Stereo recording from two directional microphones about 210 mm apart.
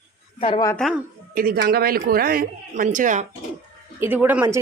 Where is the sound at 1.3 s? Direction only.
45° right (ahead or behind).